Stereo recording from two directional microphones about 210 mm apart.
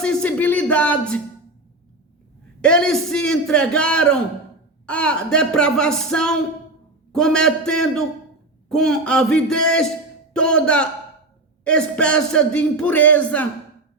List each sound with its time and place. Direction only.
0.0 s speech: 5° left (ahead or behind)
2.6 s speech: 5° left (ahead or behind)